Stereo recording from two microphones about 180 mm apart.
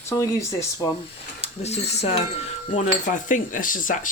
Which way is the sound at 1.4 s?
35° left (ahead or behind).